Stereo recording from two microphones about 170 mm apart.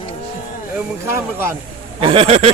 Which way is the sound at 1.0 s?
15° right (ahead or behind).